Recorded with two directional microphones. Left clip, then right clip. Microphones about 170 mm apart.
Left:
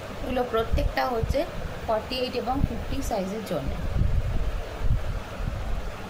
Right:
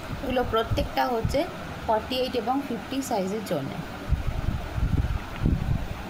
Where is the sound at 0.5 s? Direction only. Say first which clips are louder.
Right 1 dB; 20° right (ahead or behind).